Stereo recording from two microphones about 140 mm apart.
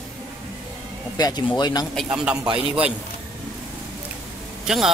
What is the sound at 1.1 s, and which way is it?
Speech, 30° left (ahead or behind).